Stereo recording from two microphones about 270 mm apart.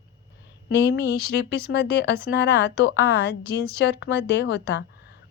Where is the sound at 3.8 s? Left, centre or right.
Left.